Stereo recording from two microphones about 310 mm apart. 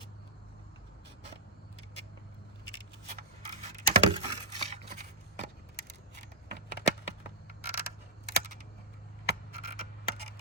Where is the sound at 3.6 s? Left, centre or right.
Right.